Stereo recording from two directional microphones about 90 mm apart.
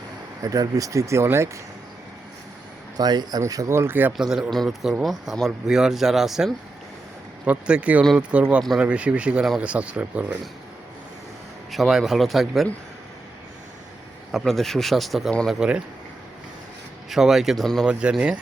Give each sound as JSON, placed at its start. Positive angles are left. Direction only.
{"t": 0.4, "sound": "speech", "side_deg": -40}
{"t": 3.0, "sound": "speech", "side_deg": -50}
{"t": 3.4, "sound": "speech", "side_deg": -35}
{"t": 4.2, "sound": "speech", "side_deg": -5}
{"t": 7.4, "sound": "speech", "side_deg": -15}
{"t": 11.7, "sound": "speech", "side_deg": 0}
{"t": 14.3, "sound": "speech", "side_deg": 0}
{"t": 17.1, "sound": "speech", "side_deg": -5}
{"t": 17.8, "sound": "speech", "side_deg": -10}